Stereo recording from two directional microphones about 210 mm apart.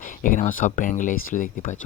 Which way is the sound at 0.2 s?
40° left (ahead or behind).